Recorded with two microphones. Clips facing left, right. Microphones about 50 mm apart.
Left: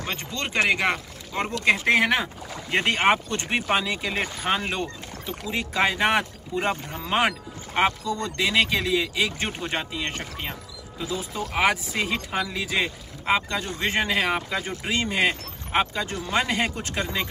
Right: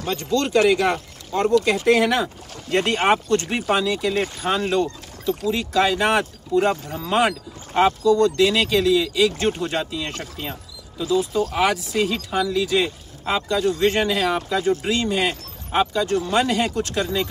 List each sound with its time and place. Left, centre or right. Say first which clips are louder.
0.0 s speech: right 8 dB; left